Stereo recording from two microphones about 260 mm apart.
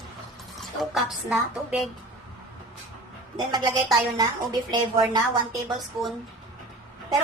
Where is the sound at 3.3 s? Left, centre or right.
Centre.